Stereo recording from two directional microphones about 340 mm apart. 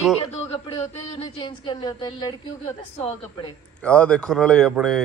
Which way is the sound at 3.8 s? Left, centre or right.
Centre.